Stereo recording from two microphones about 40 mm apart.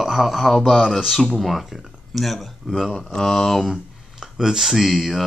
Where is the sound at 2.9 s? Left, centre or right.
Centre.